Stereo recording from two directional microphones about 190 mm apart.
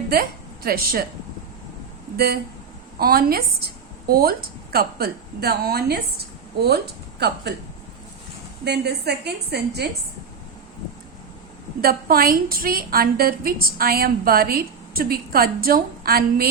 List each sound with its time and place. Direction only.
0.1 s a woman's voice: 50° right (ahead or behind)
2.1 s a woman's voice: 55° right (ahead or behind)
8.6 s a woman's voice: 60° right (ahead or behind)
11.8 s a woman's voice: 50° right (ahead or behind)